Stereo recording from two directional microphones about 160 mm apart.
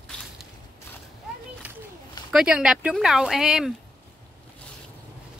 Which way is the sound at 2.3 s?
5° right (ahead or behind).